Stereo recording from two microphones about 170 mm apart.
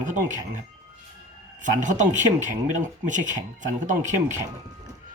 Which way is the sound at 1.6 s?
45° right (ahead or behind).